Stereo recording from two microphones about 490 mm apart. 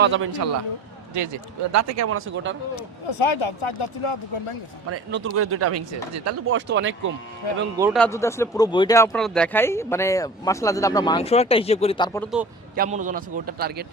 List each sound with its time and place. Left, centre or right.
0.0 s speech: right
3.1 s speech: left
4.9 s speech: right
7.8 s speech: centre
12.7 s a man's voice: centre